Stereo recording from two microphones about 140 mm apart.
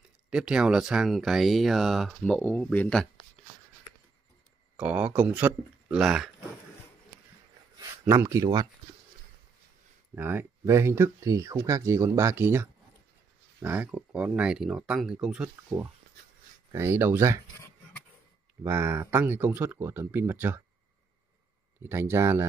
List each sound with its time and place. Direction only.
0.3 s speech: 5° right (ahead or behind)
4.7 s speech: 10° right (ahead or behind)
8.1 s speech: 20° right (ahead or behind)
10.1 s speech: 15° right (ahead or behind)
18.6 s speech: 15° right (ahead or behind)
21.8 s speech: 15° right (ahead or behind)